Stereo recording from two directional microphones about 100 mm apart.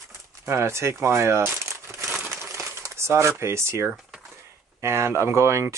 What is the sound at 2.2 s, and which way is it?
Crumpling, 30° right (ahead or behind).